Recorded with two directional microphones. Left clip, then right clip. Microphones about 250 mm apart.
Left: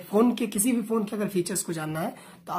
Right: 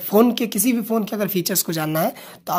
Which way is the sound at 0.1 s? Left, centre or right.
Right.